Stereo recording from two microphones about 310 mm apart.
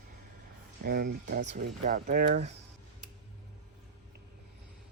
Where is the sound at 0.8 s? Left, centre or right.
Right.